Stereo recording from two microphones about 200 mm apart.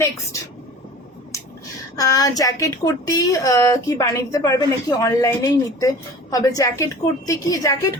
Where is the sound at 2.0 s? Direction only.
15° left (ahead or behind).